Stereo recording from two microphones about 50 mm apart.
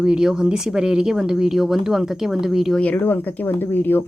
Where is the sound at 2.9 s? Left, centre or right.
Left.